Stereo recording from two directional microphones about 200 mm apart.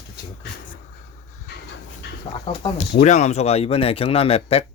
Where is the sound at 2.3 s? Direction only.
25° left (ahead or behind).